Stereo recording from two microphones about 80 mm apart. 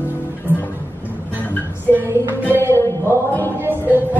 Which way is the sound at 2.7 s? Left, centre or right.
Right.